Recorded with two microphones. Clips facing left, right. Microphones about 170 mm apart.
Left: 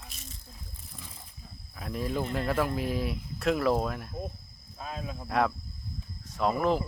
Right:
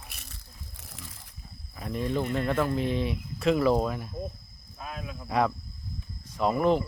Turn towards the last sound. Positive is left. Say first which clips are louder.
# right 2 dB
turn(degrees=0)  # may be behind; listen again after turning